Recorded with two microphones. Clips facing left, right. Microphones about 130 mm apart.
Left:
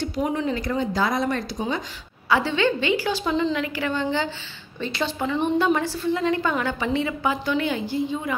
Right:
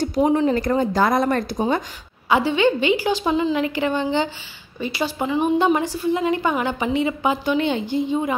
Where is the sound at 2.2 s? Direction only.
15° right (ahead or behind).